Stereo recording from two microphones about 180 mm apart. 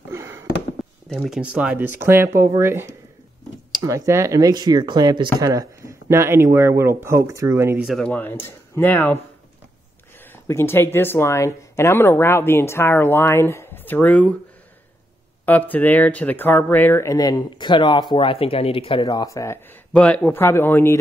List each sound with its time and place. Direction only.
0.1 s fireworks: 15° right (ahead or behind)
1.0 s speech: centre (ahead or behind); by 7.8 s 15° right (ahead or behind)
7.8 s speech: 5° left (ahead or behind)
10.2 s speech: 15° left (ahead or behind)
15.4 s speech: 10° left (ahead or behind)